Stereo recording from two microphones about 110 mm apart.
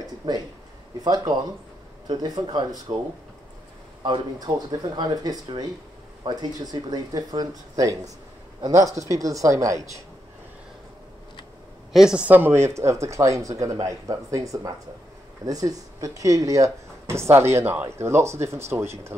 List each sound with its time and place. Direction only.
0.0 s a sound: 35° right (ahead or behind)
1.0 s speech: 35° right (ahead or behind)
4.0 s speech: 40° right (ahead or behind)
11.9 s speech: 5° right (ahead or behind); by 18.9 s 25° right (ahead or behind)